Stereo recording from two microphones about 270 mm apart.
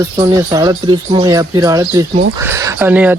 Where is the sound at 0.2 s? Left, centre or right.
Centre.